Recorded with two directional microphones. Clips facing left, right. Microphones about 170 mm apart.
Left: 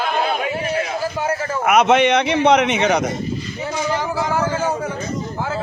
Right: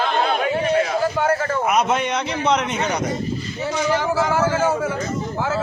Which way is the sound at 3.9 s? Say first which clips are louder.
Right 2 dB; 15° left (ahead or behind).